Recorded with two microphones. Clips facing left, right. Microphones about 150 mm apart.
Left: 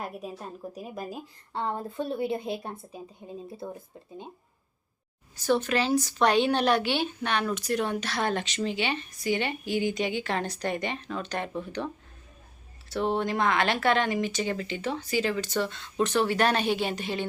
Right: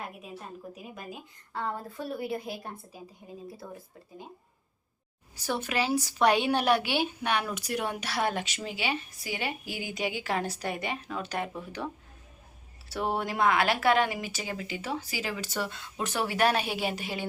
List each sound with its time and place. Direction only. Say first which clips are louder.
0.8 s speech: left 6 dB; 35° left (ahead or behind)
5.4 s a woman's voice: left 5 dB; 10° right (ahead or behind)
12.9 s a woman's voice: left 4 dB; 10° right (ahead or behind)